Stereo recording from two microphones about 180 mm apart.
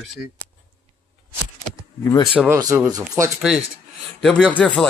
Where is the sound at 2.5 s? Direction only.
15° right (ahead or behind).